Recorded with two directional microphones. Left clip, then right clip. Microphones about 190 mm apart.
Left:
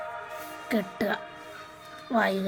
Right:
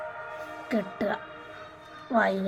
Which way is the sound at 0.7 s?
30° left (ahead or behind).